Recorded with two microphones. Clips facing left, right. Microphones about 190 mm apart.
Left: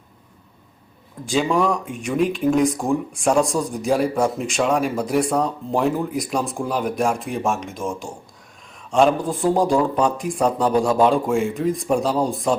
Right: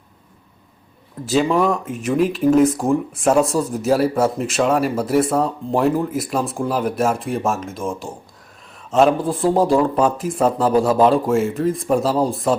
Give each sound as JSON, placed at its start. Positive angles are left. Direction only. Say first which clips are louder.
{"t": 1.2, "sound": "speech", "louder": "right 3 dB", "side_deg": 0}